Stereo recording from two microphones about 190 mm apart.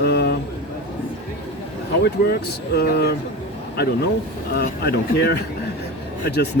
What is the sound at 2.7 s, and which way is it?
Speech, 60° left (ahead or behind).